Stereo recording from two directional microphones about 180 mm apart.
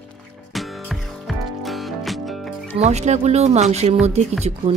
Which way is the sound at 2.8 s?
40° right (ahead or behind).